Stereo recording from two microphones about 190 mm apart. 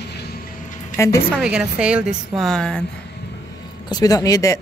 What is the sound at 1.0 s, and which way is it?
Speech, 15° left (ahead or behind).